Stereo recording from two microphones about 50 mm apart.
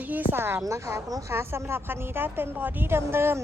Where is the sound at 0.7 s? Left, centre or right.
Right.